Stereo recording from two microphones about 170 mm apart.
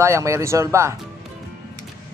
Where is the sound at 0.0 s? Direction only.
15° right (ahead or behind).